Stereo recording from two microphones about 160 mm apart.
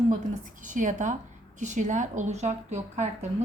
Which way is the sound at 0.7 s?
55° right (ahead or behind).